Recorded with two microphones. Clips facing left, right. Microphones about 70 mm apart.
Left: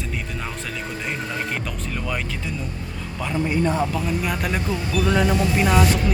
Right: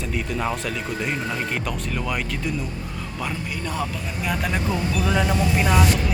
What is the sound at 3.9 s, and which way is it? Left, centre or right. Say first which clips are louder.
Speech: left 3 dB; centre.